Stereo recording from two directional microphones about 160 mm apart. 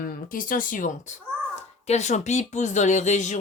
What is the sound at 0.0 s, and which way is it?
A child's voice, 60° left (ahead or behind).